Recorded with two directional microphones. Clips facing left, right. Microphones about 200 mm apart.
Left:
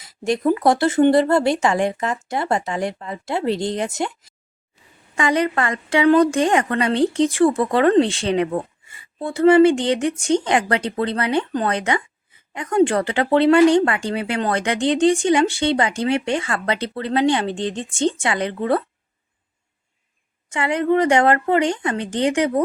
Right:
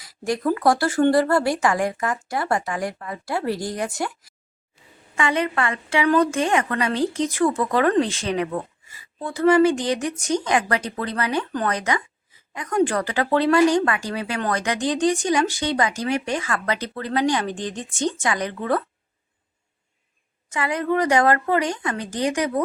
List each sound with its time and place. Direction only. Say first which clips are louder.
0.0 s speech: left 4 dB; 25° left (ahead or behind)
5.1 s a woman's voice: left 3 dB; 35° left (ahead or behind)
20.5 s speech: left 4 dB; 30° left (ahead or behind)